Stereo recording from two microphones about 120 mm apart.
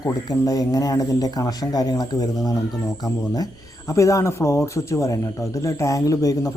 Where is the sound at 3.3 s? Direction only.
30° left (ahead or behind).